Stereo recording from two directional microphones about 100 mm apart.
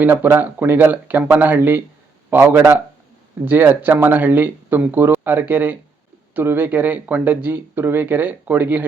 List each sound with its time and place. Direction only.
0.0 s speech: 20° right (ahead or behind)